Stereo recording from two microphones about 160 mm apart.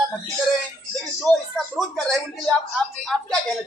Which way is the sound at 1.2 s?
Centre (ahead or behind).